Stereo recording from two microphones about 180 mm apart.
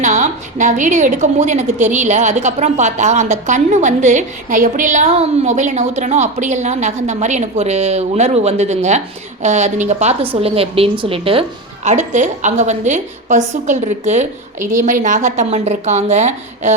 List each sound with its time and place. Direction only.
0.0 s a woman's voice: 40° right (ahead or behind)
11.9 s a woman's voice: 40° right (ahead or behind)